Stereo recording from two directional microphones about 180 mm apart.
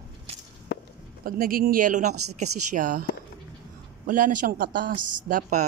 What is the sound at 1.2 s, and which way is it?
A man's voice, 55° right (ahead or behind).